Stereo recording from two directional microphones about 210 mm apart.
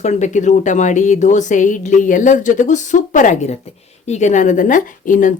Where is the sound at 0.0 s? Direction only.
35° left (ahead or behind).